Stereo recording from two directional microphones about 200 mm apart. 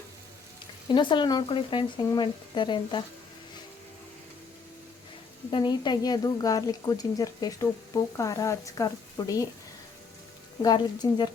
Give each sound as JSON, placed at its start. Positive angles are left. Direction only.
{"t": 0.9, "sound": "a woman's voice", "side_deg": 25}
{"t": 5.5, "sound": "a woman's voice", "side_deg": 25}
{"t": 10.6, "sound": "a woman's voice", "side_deg": 20}